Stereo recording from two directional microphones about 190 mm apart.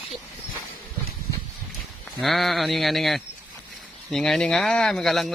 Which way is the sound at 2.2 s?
Centre (ahead or behind).